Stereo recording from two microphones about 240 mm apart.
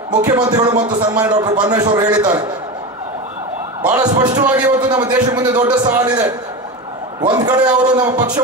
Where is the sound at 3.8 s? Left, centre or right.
Centre.